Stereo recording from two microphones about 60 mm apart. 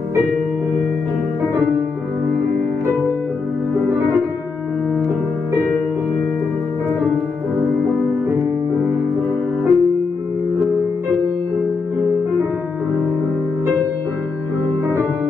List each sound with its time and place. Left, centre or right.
2.9 s music: right
9.7 s music: centre